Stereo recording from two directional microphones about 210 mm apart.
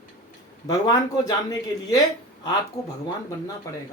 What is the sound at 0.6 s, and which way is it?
Speech, 20° left (ahead or behind).